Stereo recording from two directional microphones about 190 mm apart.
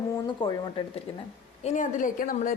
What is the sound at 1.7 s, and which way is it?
Speech, 40° left (ahead or behind).